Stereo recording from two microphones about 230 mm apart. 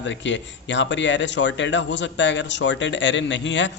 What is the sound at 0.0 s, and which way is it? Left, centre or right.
Speech, left.